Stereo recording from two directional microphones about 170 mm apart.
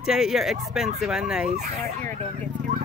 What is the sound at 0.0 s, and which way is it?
Speech, centre (ahead or behind).